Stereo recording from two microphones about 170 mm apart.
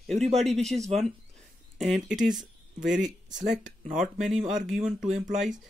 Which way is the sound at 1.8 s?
Centre (ahead or behind).